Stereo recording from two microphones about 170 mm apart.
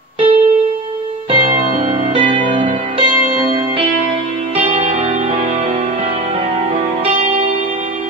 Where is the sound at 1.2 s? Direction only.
30° right (ahead or behind).